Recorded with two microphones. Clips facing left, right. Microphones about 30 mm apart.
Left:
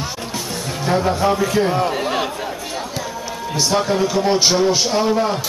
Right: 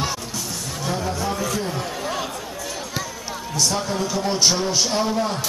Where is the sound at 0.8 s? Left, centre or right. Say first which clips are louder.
Left 8 dB; left.